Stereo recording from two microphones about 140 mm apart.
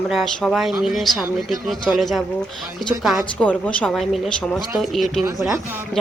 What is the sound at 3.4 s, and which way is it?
A woman's voice, 10° left (ahead or behind).